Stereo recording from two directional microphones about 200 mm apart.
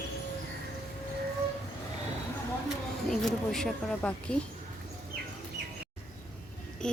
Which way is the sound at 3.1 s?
Centre (ahead or behind).